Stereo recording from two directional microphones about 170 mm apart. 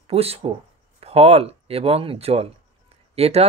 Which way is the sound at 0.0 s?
35° right (ahead or behind).